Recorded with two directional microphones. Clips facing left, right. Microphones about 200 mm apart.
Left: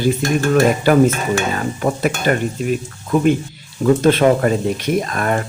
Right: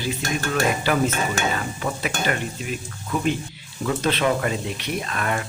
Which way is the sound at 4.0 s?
45° left (ahead or behind).